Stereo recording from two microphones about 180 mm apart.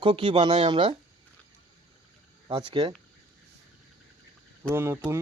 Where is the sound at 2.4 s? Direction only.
25° right (ahead or behind).